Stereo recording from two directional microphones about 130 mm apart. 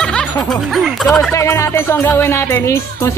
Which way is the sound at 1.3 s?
20° left (ahead or behind).